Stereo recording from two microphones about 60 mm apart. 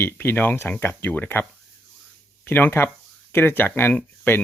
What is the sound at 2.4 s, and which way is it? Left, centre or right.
Speech, left.